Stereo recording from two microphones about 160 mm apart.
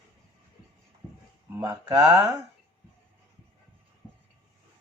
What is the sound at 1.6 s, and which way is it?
Speech, 20° right (ahead or behind).